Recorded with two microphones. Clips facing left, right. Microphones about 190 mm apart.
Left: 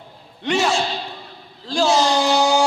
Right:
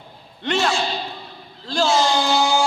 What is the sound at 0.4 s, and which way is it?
Speech, 5° left (ahead or behind).